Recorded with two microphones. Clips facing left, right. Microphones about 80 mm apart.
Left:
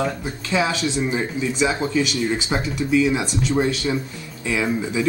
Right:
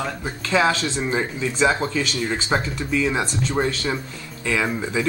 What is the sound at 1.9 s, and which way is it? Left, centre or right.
Speech, centre.